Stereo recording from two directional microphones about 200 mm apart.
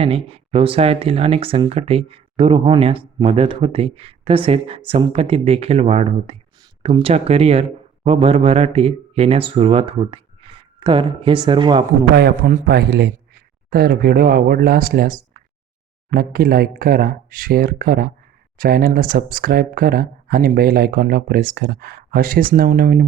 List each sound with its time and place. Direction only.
0.0 s speech: 30° right (ahead or behind)
12.1 s a man's voice: 50° right (ahead or behind)